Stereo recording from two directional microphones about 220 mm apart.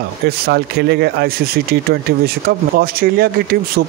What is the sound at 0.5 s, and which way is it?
Speech, 45° right (ahead or behind).